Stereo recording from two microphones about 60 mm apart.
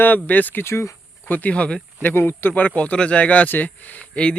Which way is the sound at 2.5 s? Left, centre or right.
Left.